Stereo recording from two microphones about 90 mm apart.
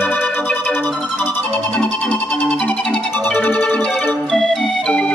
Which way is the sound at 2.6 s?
15° left (ahead or behind).